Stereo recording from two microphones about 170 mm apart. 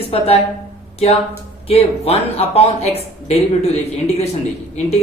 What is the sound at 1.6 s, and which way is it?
Speech, 35° left (ahead or behind).